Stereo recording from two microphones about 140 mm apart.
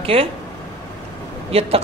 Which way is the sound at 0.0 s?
45° right (ahead or behind).